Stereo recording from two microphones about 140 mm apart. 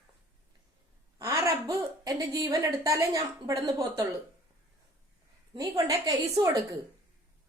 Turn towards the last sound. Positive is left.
turn(degrees=-25)  # may be behind; listen again after turning